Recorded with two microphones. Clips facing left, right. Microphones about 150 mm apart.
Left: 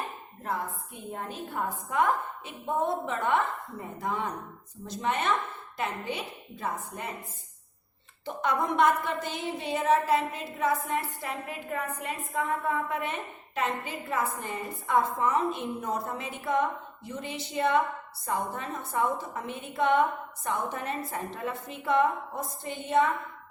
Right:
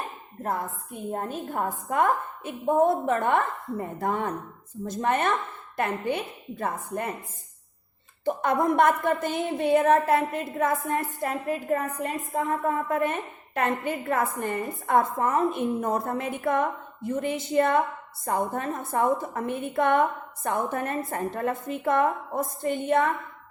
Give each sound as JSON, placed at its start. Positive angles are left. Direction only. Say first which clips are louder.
{"t": 1.1, "sound": "a woman's voice", "louder": "right 5 dB", "side_deg": -45}
{"t": 8.2, "sound": "a woman's voice", "louder": "right 5 dB", "side_deg": -50}